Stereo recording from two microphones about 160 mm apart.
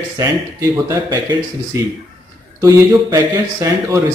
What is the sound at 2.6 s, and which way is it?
A man's voice, 20° right (ahead or behind).